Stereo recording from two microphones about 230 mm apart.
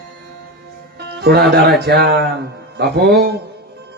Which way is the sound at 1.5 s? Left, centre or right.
Right.